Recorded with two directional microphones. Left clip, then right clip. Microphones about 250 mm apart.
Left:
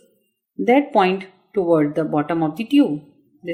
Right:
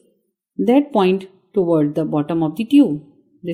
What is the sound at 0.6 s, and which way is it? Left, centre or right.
A woman's voice, right.